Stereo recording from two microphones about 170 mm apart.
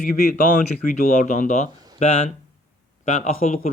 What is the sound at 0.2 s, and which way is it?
A man's voice, 55° left (ahead or behind).